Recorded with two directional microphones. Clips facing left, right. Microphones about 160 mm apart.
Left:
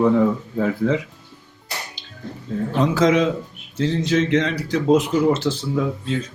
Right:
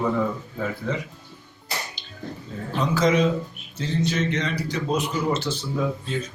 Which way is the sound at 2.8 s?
90° left.